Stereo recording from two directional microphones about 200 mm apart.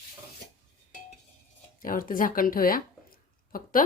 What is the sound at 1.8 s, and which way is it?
Speech, 45° left (ahead or behind).